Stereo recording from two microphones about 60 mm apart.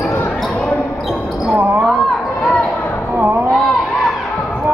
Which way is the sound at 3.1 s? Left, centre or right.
Right.